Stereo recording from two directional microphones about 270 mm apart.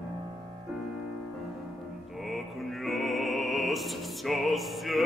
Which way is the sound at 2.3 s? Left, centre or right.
Centre.